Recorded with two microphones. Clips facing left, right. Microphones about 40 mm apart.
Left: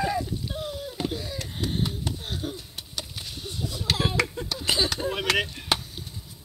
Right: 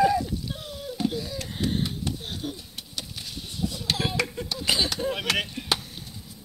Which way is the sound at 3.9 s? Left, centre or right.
Left.